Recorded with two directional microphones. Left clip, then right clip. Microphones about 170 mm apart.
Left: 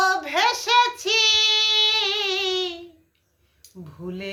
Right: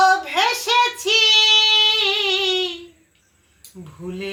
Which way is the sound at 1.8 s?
25° left (ahead or behind).